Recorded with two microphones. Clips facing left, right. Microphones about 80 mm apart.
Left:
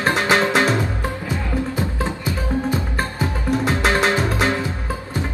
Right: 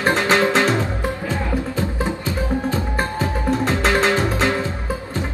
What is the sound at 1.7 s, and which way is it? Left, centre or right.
Music, centre.